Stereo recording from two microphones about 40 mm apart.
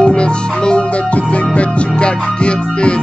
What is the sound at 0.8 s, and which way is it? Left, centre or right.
Music, left.